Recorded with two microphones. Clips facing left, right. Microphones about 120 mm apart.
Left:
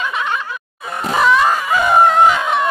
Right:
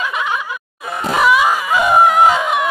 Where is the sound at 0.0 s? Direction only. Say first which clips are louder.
Even; 5° right (ahead or behind).